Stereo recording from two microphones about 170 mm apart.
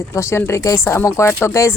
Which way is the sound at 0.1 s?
15° left (ahead or behind).